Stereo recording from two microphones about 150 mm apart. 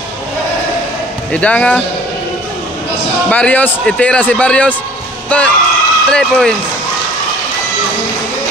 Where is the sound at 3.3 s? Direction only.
10° left (ahead or behind).